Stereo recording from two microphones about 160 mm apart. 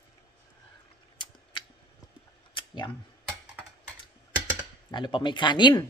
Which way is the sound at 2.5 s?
30° left (ahead or behind).